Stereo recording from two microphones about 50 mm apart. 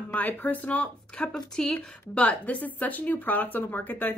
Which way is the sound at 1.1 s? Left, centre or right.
Centre.